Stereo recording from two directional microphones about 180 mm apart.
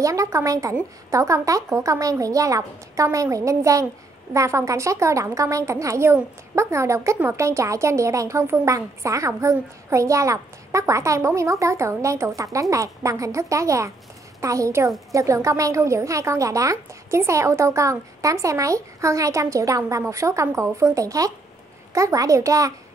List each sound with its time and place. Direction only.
0.0 s a woman's voice: 20° right (ahead or behind)